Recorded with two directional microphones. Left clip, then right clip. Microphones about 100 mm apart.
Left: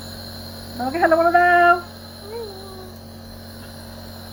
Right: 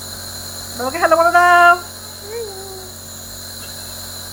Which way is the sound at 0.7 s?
15° right (ahead or behind).